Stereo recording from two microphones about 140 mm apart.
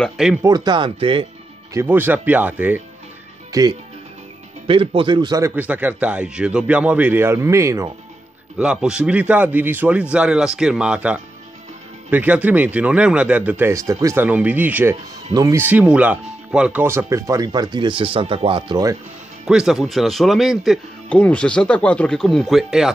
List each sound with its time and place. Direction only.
0.0 s speech: 5° right (ahead or behind)
0.4 s speech: 30° right (ahead or behind)
1.7 s speech: 15° right (ahead or behind)
3.5 s speech: 25° right (ahead or behind)
4.6 s speech: 40° right (ahead or behind)
5.4 s speech: 15° right (ahead or behind)
8.5 s speech: 5° right (ahead or behind)
16.8 s speech: 20° right (ahead or behind)
19.4 s speech: 5° right (ahead or behind)